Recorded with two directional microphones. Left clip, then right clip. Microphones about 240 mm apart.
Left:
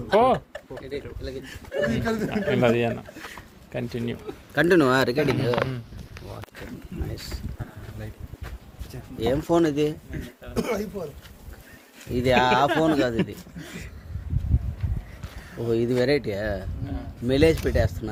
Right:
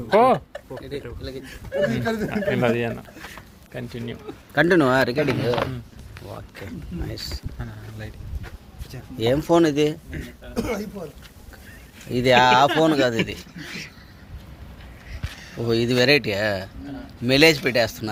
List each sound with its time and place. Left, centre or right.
0.1 s speech: centre
1.5 s speech: centre
1.9 s speech: centre
2.4 s speech: centre
3.7 s speech: left
4.5 s speech: centre
7.6 s speech: centre
9.1 s speech: centre
12.1 s speech: centre
15.7 s speech: centre